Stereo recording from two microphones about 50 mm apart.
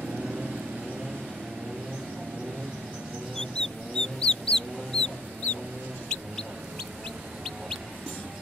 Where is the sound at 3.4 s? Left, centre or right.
Centre.